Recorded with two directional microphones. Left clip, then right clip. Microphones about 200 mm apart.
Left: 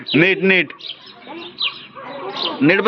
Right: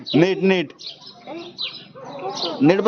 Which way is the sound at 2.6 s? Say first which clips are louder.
Left 2 dB; 20° right (ahead or behind).